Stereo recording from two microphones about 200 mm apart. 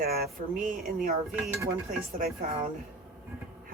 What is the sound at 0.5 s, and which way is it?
Speech, 45° right (ahead or behind).